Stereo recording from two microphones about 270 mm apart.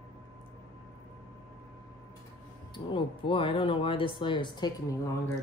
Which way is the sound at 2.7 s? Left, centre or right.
Centre.